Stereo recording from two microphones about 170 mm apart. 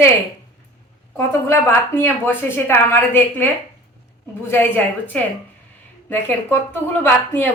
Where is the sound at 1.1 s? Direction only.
15° left (ahead or behind).